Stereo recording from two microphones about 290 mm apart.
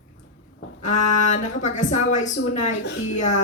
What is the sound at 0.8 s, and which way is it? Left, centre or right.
Speech, left.